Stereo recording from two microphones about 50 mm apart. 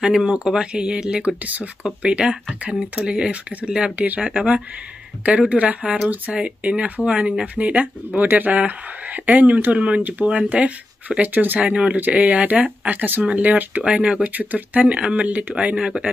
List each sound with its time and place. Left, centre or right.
0.0 s speech: centre
1.4 s speech: right
4.0 s speech: right
5.5 s speech: right
11.7 s speech: right
13.8 s speech: right
14.3 s speech: right; by 16.1 s centre